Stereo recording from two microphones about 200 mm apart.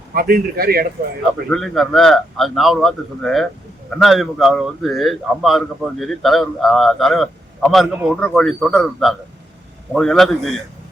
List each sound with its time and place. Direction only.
0.1 s a man's voice: 50° right (ahead or behind)
1.5 s a man's voice: centre (ahead or behind)